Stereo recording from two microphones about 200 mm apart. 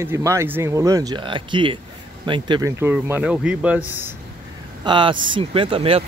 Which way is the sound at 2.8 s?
10° right (ahead or behind).